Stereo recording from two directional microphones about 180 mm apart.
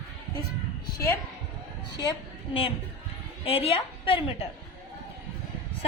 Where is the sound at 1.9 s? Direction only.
25° left (ahead or behind).